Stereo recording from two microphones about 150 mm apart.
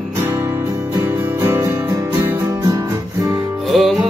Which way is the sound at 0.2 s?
20° right (ahead or behind).